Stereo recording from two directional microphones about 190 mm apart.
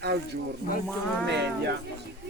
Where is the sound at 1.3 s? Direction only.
65° right (ahead or behind).